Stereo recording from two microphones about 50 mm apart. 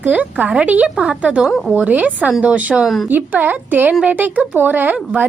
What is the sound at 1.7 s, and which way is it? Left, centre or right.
A woman's voice, right.